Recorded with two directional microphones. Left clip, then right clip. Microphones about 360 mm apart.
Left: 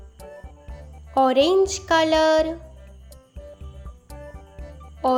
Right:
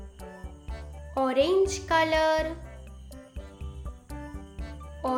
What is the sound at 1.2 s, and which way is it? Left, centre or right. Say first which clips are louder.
Speech: left 6 dB; centre.